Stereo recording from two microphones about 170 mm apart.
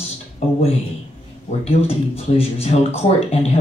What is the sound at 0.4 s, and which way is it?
Speech, 35° left (ahead or behind).